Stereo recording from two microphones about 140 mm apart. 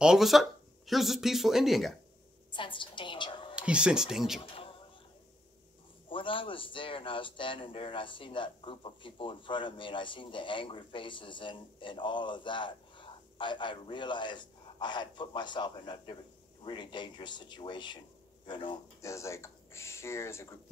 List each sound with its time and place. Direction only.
0.0 s speech: 5° right (ahead or behind)
2.5 s a woman's voice: 35° left (ahead or behind)
3.5 s speech: 5° right (ahead or behind)
6.0 s a man's voice: 40° left (ahead or behind)
18.9 s speech: 20° left (ahead or behind)